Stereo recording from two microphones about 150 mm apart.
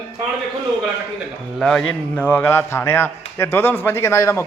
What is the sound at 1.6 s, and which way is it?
A man's voice, 5° left (ahead or behind).